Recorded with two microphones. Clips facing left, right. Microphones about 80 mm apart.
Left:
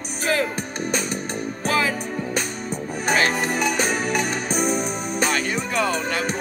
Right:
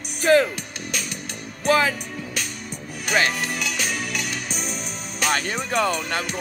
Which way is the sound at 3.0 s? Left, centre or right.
Left.